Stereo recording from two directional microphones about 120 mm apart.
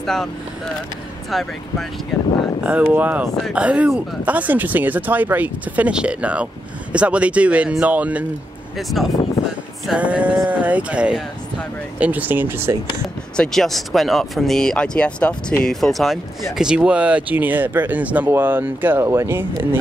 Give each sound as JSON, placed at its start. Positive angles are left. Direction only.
{"t": 0.0, "sound": "speech", "side_deg": 0}
{"t": 1.3, "sound": "speech", "side_deg": 0}
{"t": 2.6, "sound": "speech", "side_deg": -15}
{"t": 9.0, "sound": "speech", "side_deg": 0}
{"t": 9.9, "sound": "speech", "side_deg": -10}
{"t": 13.4, "sound": "speech", "side_deg": 5}